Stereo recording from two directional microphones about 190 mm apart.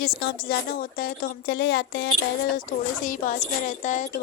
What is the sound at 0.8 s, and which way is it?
Speech, 50° left (ahead or behind).